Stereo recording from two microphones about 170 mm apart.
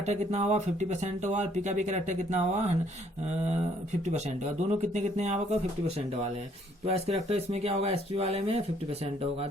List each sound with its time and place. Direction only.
0.1 s speech: 40° right (ahead or behind)
4.7 s speech: 45° right (ahead or behind)
6.8 s speech: 35° right (ahead or behind)